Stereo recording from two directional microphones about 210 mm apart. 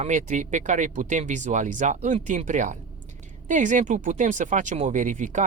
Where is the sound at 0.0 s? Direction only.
35° right (ahead or behind).